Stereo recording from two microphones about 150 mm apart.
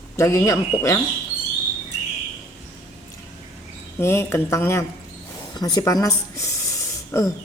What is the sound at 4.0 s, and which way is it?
Speech, 15° left (ahead or behind).